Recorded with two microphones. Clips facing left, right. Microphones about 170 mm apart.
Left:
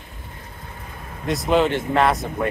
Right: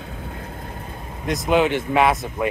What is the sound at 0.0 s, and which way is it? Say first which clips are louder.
Vehicle: right 8 dB; 75° right (ahead or behind).